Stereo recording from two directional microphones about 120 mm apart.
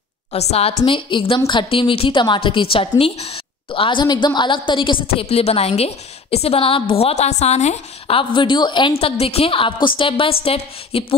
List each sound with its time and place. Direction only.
0.3 s a woman's voice: 60° left (ahead or behind)
0.8 s a woman's voice: 45° left (ahead or behind); by 8.2 s 70° left (ahead or behind)
8.2 s a woman's voice: 45° left (ahead or behind)
9.0 s a woman's voice: 55° left (ahead or behind)